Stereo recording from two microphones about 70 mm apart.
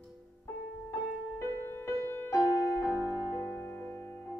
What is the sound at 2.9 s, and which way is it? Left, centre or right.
Music, right.